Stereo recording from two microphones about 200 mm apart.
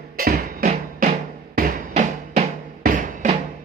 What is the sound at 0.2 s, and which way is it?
Music, 45° right (ahead or behind).